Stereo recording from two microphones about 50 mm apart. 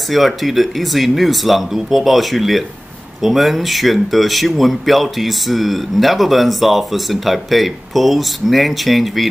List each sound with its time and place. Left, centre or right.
0.1 s speech: centre